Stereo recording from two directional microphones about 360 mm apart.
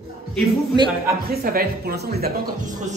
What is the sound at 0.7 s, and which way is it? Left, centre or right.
Speech, centre.